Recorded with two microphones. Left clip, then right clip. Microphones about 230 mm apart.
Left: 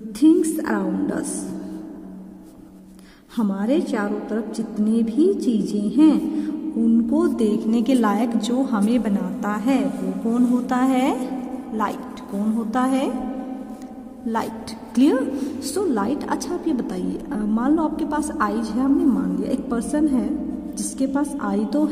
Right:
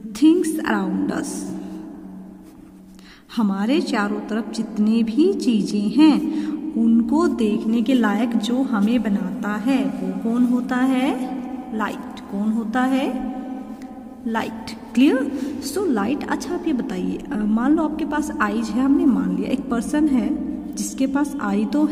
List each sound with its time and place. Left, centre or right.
0.2 s a woman's voice: centre
3.3 s a woman's voice: centre
15.0 s a woman's voice: centre